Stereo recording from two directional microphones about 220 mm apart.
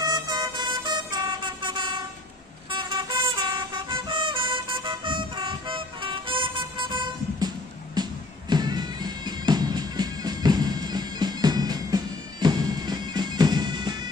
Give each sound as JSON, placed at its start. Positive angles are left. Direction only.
{"t": 0.0, "sound": "vehicle", "side_deg": -20}